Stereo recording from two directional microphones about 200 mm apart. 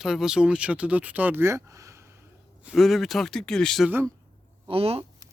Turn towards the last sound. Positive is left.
turn(degrees=-30)  # may be behind; listen again after turning